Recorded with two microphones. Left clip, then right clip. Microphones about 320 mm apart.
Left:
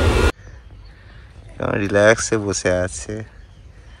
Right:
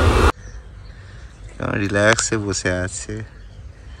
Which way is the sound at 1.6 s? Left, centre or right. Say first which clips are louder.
Left 3 dB; centre.